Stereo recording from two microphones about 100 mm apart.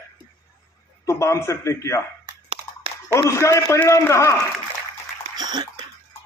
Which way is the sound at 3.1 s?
30° left (ahead or behind).